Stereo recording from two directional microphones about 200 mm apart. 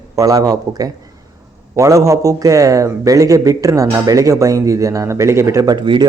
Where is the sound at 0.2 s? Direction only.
20° right (ahead or behind).